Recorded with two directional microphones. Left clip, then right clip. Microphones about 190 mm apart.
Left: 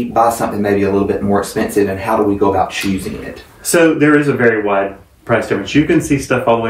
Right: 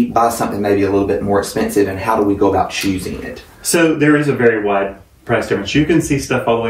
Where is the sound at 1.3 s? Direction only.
Centre (ahead or behind).